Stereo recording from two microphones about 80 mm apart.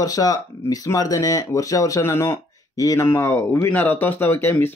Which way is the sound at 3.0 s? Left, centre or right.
Left.